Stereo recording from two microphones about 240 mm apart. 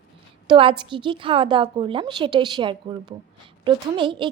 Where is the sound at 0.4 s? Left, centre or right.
Right.